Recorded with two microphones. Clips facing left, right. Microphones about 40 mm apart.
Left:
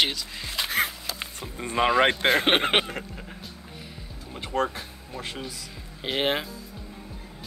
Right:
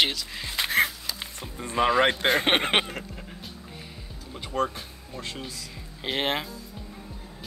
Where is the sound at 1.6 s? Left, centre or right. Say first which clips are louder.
Even; left.